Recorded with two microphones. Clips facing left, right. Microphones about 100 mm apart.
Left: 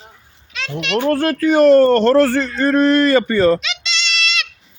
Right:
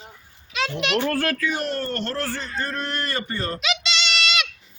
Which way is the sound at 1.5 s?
90° left.